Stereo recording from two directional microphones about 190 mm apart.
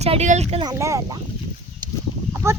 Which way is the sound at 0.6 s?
15° right (ahead or behind).